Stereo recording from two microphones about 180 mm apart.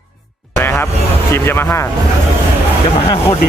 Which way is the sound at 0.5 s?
15° left (ahead or behind).